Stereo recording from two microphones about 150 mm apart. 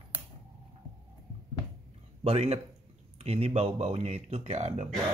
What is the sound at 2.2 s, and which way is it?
Speech, 40° right (ahead or behind).